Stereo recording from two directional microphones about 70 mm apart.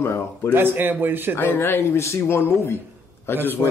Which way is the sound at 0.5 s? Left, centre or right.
Right.